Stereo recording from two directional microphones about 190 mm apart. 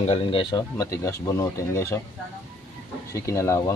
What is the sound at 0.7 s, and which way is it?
Speech, 15° left (ahead or behind).